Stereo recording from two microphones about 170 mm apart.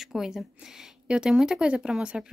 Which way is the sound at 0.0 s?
Centre (ahead or behind).